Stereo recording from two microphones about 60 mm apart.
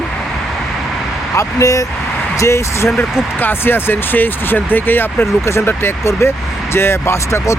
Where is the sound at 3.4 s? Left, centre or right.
Left.